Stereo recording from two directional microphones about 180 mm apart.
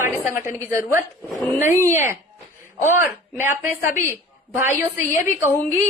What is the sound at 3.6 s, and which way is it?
A woman's voice, 15° right (ahead or behind).